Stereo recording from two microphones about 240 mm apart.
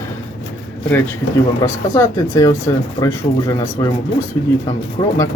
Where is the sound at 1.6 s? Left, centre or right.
Centre.